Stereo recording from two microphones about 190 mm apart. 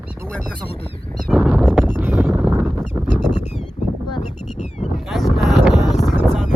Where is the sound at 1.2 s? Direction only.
Centre (ahead or behind).